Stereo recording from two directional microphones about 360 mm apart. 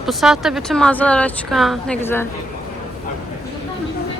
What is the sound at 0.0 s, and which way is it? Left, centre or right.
A woman's voice, centre.